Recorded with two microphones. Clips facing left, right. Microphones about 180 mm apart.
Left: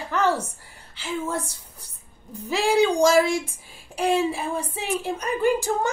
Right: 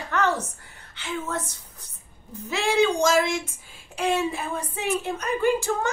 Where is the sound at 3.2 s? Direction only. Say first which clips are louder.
Left 3 dB; 35° left (ahead or behind).